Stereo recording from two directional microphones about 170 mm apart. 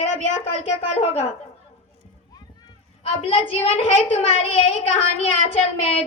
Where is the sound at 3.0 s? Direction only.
35° left (ahead or behind).